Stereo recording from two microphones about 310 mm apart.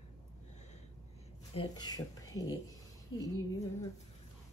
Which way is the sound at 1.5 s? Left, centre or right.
Centre.